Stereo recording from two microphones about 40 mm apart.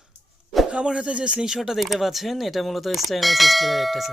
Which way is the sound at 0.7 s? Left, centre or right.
Right.